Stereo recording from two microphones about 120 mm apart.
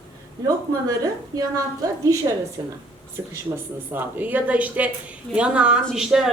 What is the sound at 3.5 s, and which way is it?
Speech, 40° right (ahead or behind).